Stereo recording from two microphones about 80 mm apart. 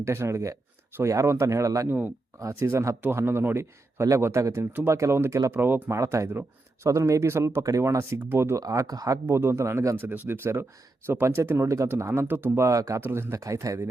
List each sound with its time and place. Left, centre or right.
0.0 s speech: right
4.6 s speech: right
6.0 s speech: right
8.6 s speech: right
9.2 s speech: right
12.5 s speech: right
13.0 s speech: right